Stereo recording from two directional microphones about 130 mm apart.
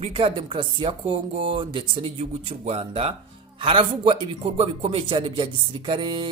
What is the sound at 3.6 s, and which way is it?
Speech, 40° right (ahead or behind).